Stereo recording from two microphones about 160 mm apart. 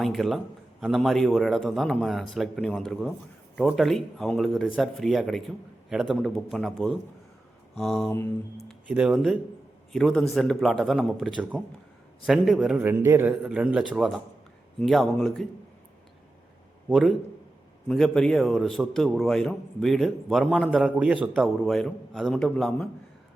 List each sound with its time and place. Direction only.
0.0 s a man's voice: centre (ahead or behind)
8.1 s a sound: 15° left (ahead or behind)
8.9 s a man's voice: 5° right (ahead or behind)
16.9 s a man's voice: centre (ahead or behind)